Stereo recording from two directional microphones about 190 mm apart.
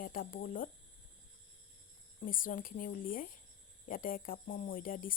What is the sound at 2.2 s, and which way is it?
Speech, 45° left (ahead or behind).